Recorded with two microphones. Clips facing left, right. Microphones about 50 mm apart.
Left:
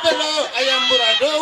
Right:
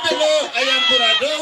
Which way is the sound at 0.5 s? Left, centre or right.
Right.